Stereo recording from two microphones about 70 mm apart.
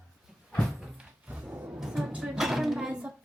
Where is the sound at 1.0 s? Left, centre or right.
Centre.